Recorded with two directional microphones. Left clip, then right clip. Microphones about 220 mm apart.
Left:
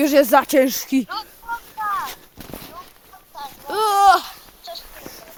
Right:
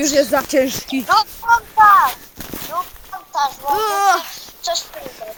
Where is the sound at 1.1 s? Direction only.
45° right (ahead or behind).